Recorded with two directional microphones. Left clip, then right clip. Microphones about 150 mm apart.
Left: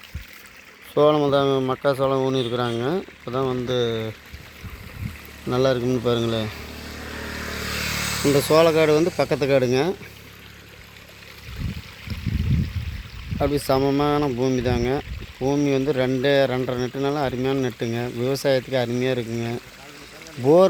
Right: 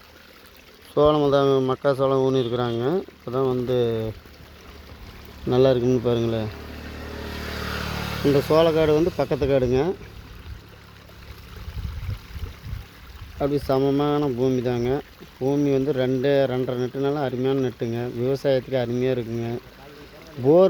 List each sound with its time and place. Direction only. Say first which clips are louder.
0.9 s speech: even; 5° left (ahead or behind)
3.7 s speech: right 1 dB; 15° right (ahead or behind)
5.5 s speech: right 2 dB; 25° right (ahead or behind); by 6.5 s 10° right (ahead or behind)
7.1 s vehicle: left 2 dB; 20° right (ahead or behind); by 8.3 s 70° right (ahead or behind)
8.3 s speech: left 1 dB; centre (ahead or behind)
13.4 s speech: left 1 dB; 5° left (ahead or behind)